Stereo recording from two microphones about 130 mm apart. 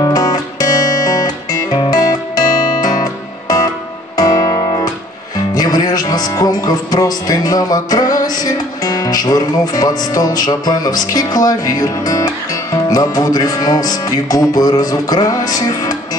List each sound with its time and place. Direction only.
0.0 s guitar: 30° left (ahead or behind)
4.2 s music: 30° left (ahead or behind)